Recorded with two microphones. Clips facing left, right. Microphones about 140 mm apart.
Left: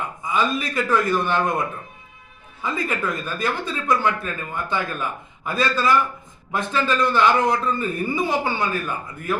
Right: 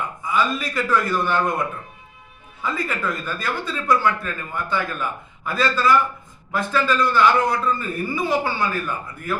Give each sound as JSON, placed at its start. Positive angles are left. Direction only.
{"t": 0.2, "sound": "speech", "side_deg": 20}
{"t": 2.6, "sound": "speech", "side_deg": 20}